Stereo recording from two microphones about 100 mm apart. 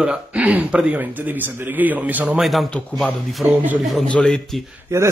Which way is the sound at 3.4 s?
15° right (ahead or behind).